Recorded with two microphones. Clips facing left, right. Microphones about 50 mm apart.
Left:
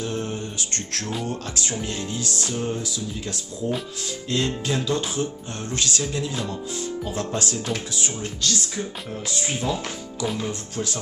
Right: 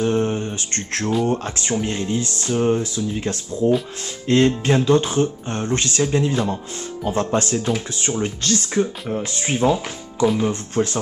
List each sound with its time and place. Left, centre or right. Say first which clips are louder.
0.0 s mantra: right 8 dB; right
1.2 s speech: right 7 dB; right